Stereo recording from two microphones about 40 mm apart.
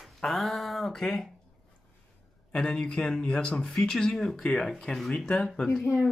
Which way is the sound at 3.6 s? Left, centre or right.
Centre.